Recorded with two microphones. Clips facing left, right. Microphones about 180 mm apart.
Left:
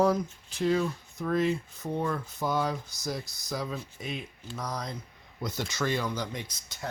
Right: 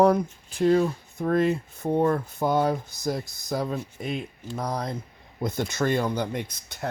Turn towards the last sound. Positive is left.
turn(degrees=-60)  # may be behind; listen again after turning